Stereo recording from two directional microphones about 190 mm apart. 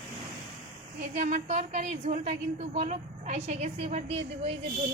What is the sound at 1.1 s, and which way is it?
A woman's voice, 35° right (ahead or behind).